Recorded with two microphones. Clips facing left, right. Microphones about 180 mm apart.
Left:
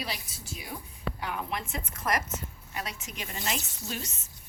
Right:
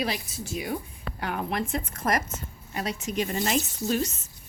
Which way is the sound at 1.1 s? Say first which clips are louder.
Right 7 dB; 50° right (ahead or behind).